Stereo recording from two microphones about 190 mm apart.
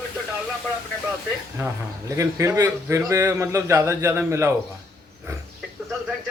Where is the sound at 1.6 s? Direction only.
15° right (ahead or behind).